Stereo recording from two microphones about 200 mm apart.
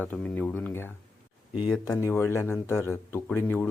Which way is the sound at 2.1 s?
10° left (ahead or behind).